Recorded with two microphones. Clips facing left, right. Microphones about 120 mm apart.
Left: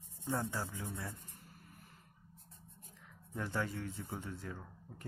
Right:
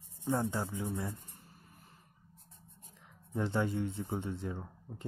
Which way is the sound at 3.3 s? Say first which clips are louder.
Right 6 dB; 20° right (ahead or behind).